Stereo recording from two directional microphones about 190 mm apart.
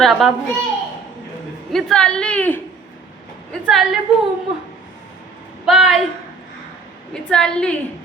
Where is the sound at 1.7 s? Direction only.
Centre (ahead or behind).